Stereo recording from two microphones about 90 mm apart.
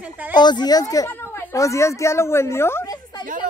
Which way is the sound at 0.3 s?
55° left (ahead or behind).